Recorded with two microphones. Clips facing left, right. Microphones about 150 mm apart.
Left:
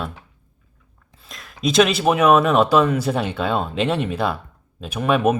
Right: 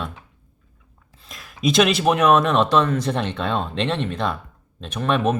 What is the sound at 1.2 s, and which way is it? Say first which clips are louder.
Speech: right 1 dB; centre (ahead or behind).